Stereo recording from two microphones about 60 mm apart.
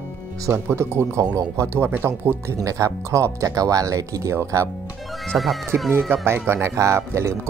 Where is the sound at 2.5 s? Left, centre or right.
Right.